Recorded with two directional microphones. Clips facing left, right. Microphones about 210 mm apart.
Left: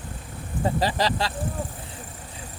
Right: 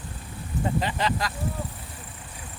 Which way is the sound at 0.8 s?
35° left (ahead or behind).